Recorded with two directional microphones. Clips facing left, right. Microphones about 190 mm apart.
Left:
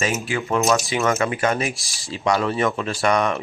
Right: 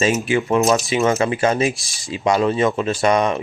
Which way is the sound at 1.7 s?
Centre (ahead or behind).